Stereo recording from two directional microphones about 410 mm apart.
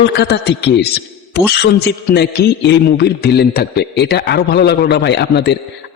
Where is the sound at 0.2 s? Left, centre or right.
Left.